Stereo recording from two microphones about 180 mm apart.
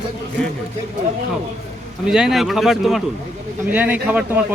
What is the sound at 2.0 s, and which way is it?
A man's voice, 5° right (ahead or behind).